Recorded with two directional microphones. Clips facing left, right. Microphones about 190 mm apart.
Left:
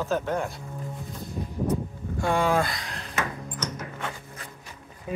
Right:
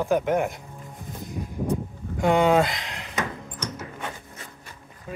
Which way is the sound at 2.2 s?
20° right (ahead or behind).